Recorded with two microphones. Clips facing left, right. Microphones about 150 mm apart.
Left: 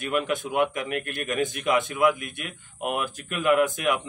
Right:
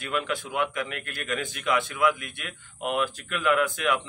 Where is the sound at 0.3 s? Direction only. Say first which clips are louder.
Left 4 dB; 20° left (ahead or behind).